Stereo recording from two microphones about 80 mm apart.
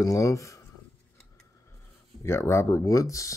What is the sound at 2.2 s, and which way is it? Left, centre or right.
Speech, left.